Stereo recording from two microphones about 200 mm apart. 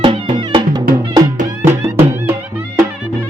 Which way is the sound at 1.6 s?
10° right (ahead or behind).